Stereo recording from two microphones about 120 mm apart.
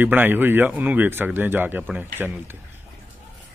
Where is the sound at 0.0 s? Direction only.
15° right (ahead or behind).